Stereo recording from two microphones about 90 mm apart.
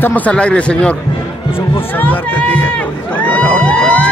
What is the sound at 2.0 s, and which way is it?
Speech, 20° left (ahead or behind).